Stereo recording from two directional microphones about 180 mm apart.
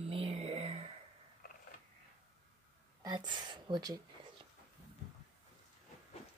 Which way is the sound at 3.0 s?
25° right (ahead or behind).